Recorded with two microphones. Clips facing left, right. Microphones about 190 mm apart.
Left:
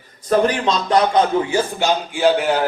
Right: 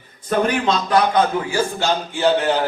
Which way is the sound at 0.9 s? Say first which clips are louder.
Left 2 dB; 25° left (ahead or behind).